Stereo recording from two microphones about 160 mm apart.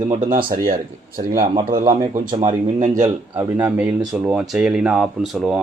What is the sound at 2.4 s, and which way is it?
Speech, 45° right (ahead or behind).